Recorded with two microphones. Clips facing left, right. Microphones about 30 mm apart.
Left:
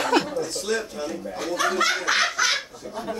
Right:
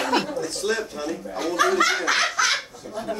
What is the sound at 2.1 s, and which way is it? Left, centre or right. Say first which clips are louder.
Laughter: right 1 dB; centre.